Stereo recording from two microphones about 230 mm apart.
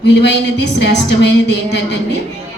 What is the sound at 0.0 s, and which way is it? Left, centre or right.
A woman's voice, left.